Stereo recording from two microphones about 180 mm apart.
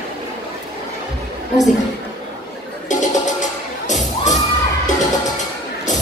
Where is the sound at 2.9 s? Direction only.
45° left (ahead or behind).